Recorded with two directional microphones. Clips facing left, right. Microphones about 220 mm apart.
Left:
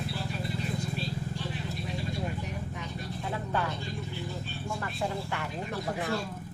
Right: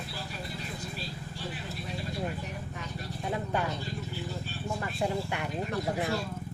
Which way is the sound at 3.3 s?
15° right (ahead or behind).